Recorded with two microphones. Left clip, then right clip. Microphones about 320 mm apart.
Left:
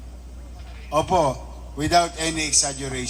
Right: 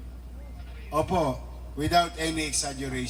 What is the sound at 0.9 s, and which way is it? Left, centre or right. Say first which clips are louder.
A man's voice: left 6 dB; left.